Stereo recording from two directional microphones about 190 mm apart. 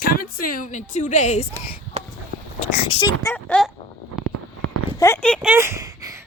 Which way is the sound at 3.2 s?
10° left (ahead or behind).